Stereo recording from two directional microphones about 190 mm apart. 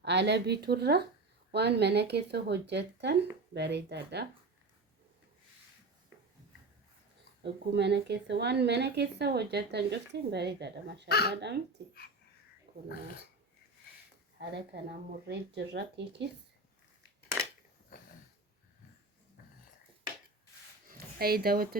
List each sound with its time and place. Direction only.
0.0 s a woman's voice: 65° right (ahead or behind)
7.4 s a woman's voice: 65° right (ahead or behind)
12.9 s speech: 50° left (ahead or behind)
14.3 s a woman's voice: 60° right (ahead or behind)
21.2 s speech: 55° right (ahead or behind)